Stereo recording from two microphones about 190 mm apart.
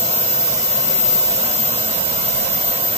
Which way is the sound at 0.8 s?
30° right (ahead or behind).